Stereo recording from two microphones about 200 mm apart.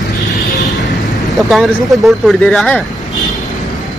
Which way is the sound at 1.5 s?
Centre (ahead or behind).